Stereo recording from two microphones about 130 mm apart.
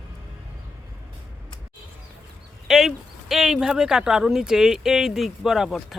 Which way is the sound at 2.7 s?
5° right (ahead or behind).